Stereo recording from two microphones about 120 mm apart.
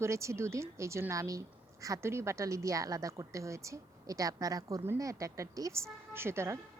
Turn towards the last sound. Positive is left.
turn(degrees=-20)  # may be behind; listen again after turning